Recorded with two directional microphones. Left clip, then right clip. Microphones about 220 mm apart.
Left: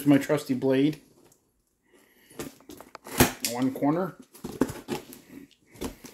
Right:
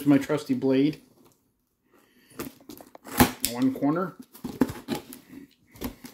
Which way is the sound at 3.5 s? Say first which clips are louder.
Right 1 dB; 5° right (ahead or behind).